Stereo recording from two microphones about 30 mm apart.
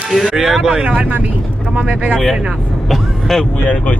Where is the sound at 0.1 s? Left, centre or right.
Centre.